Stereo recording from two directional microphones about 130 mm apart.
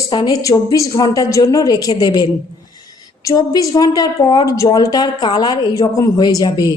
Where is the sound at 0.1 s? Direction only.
30° left (ahead or behind).